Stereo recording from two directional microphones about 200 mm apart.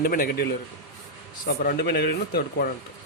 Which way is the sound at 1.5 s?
50° left (ahead or behind).